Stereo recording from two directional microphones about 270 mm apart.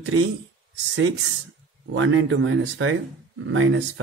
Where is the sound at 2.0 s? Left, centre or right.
Right.